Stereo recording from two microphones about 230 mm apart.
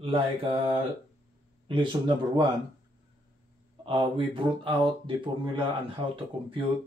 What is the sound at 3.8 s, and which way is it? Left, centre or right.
Speech, right.